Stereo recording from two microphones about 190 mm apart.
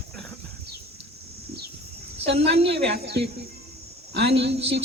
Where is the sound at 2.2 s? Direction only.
65° right (ahead or behind).